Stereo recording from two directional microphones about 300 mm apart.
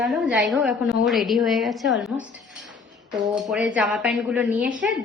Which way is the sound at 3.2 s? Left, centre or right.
Centre.